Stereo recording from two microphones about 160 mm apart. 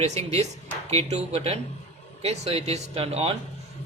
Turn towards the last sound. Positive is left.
turn(degrees=-40)  # may be behind; listen again after turning